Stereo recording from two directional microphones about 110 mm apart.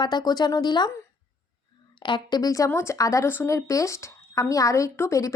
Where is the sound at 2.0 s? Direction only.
45° left (ahead or behind); by 5.3 s 25° left (ahead or behind).